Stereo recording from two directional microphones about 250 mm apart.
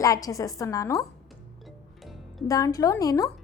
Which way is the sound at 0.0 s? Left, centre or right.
Centre.